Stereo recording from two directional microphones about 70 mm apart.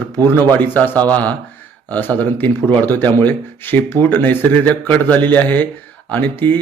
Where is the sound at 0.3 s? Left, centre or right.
Left.